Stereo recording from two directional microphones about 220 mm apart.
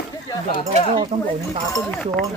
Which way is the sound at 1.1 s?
30° right (ahead or behind).